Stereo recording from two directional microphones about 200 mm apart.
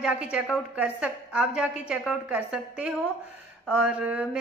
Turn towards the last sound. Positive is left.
turn(degrees=-5)  # may be behind; listen again after turning